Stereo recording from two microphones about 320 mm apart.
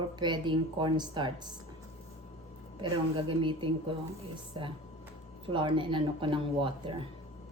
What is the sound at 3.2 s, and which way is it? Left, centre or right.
Speech, centre.